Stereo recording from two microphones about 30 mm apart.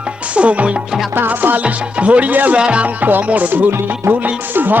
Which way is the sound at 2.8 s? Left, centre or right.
Right.